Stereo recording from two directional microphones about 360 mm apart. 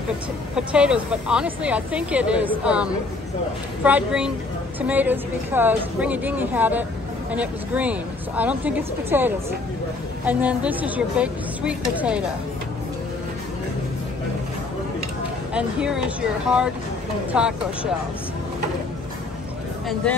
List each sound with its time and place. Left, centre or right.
0.6 s speech: centre
15.5 s speech: centre